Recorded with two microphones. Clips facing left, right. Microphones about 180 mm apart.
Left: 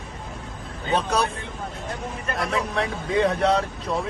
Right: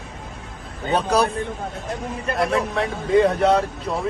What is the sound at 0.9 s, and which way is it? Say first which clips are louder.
Speech: right 4 dB; 35° right (ahead or behind).